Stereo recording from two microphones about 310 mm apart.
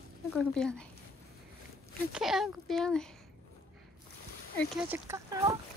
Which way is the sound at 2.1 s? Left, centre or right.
Centre.